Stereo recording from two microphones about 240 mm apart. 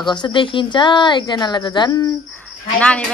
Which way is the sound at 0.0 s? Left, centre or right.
Centre.